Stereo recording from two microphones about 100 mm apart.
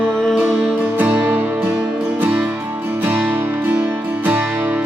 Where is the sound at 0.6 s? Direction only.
10° right (ahead or behind).